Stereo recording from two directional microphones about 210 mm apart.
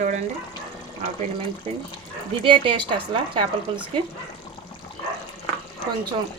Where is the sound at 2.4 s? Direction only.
25° right (ahead or behind).